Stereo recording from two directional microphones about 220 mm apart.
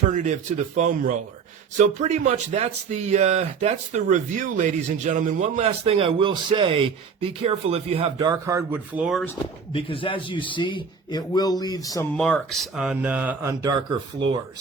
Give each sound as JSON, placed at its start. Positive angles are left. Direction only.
{"t": 0.1, "sound": "speech", "side_deg": -35}
{"t": 9.7, "sound": "a man's voice", "side_deg": 25}
{"t": 12.1, "sound": "speech", "side_deg": 5}